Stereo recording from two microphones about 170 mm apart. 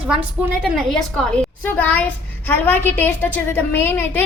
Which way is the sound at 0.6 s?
Centre (ahead or behind).